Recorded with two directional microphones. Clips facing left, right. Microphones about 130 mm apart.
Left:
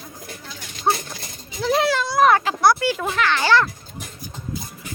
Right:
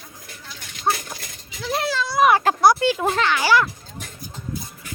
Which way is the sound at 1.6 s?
65° left (ahead or behind).